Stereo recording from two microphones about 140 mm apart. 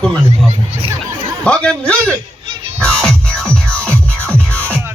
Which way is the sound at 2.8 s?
5° left (ahead or behind).